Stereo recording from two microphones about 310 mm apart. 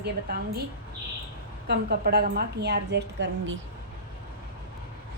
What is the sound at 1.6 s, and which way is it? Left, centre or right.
A woman's voice, right.